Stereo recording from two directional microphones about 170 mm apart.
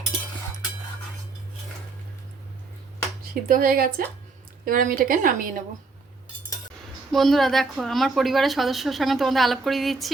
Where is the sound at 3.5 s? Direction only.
55° right (ahead or behind).